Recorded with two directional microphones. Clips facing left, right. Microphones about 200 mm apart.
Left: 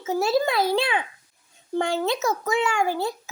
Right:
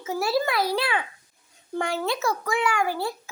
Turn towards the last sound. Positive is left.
turn(degrees=25)  # may be behind; listen again after turning